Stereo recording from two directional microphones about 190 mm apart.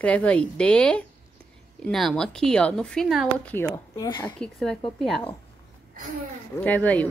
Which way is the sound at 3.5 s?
10° left (ahead or behind).